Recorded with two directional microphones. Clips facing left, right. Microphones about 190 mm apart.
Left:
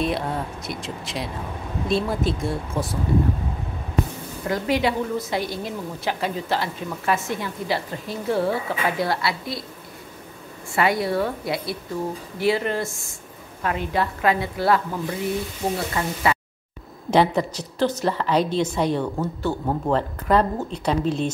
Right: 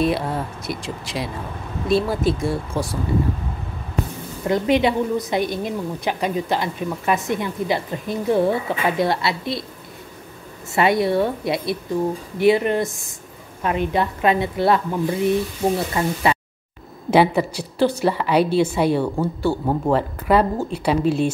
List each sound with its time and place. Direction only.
0.0 s speech: centre (ahead or behind)
4.5 s a woman's voice: 20° right (ahead or behind)
10.7 s a woman's voice: 25° right (ahead or behind)
17.1 s a woman's voice: 10° right (ahead or behind)